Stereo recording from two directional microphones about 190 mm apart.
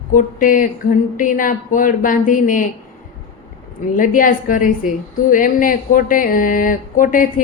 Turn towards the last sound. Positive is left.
turn(degrees=45)  # may be behind; listen again after turning